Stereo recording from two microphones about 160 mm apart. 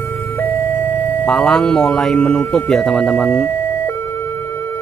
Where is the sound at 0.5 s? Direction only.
55° right (ahead or behind).